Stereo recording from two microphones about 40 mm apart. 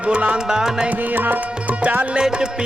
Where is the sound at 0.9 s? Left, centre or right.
Right.